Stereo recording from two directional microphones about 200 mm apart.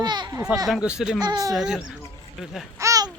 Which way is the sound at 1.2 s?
20° right (ahead or behind).